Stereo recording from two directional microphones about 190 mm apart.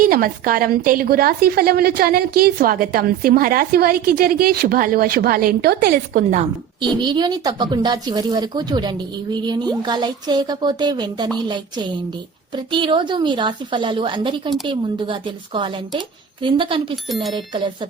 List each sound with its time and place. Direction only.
0.0 s a woman's voice: 50° right (ahead or behind)
7.0 s speech: 25° right (ahead or behind)